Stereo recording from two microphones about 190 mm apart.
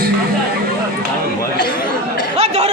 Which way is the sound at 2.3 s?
35° right (ahead or behind).